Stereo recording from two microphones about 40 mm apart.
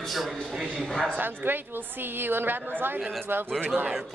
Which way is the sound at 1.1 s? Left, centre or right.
Right.